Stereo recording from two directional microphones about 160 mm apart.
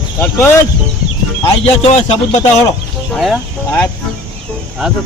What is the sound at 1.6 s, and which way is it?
Speech, 40° left (ahead or behind).